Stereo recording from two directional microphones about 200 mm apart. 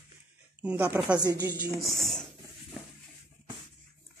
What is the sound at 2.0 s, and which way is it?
Speech, centre (ahead or behind).